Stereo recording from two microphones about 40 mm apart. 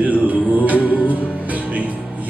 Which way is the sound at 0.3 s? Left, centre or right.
Right.